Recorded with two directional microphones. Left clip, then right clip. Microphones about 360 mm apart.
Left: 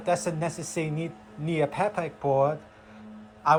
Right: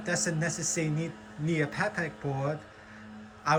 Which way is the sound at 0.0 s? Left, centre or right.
Centre.